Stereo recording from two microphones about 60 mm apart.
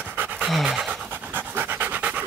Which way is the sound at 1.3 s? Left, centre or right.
Right.